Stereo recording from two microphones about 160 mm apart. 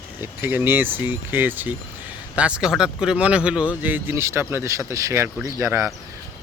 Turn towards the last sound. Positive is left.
turn(degrees=-20)  # may be behind; listen again after turning